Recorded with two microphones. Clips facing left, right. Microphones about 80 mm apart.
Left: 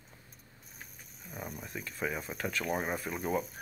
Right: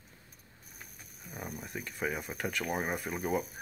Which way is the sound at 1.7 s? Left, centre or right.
Right.